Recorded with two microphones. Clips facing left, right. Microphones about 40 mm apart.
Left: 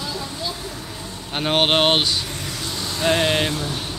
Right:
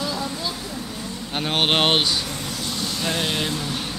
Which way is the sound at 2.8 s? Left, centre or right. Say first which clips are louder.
Left 7 dB; left.